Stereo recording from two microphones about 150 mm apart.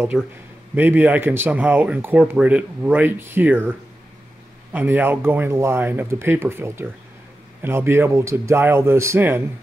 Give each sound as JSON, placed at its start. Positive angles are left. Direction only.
{"t": 0.1, "sound": "a man's voice", "side_deg": 0}
{"t": 0.7, "sound": "speech", "side_deg": -15}
{"t": 4.7, "sound": "speech", "side_deg": -15}